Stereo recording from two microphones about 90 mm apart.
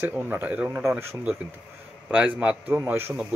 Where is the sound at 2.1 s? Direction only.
15° right (ahead or behind).